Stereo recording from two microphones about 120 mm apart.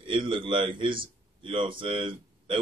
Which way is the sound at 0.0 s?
45° right (ahead or behind).